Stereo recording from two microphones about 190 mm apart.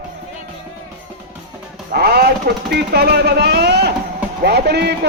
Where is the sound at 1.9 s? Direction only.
55° right (ahead or behind).